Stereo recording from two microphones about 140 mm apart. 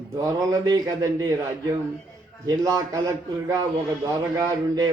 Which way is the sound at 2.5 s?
25° right (ahead or behind).